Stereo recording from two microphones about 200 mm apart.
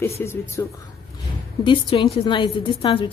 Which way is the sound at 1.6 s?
25° left (ahead or behind).